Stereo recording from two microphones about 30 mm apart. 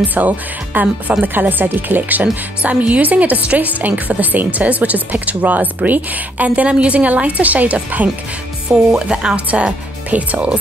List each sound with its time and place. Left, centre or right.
0.0 s speech: right
0.7 s speech: right
2.6 s a woman's voice: right
3.0 s a woman's voice: right
4.3 s a woman's voice: right
5.4 s speech: right
5.9 s a woman's voice: right
6.5 s a woman's voice: right
8.6 s speech: right
10.1 s a woman's voice: right